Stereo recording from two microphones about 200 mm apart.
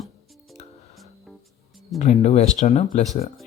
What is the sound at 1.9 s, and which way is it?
Speech, 35° left (ahead or behind).